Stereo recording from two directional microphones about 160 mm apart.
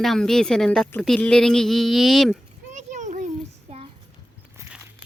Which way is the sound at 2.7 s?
50° right (ahead or behind).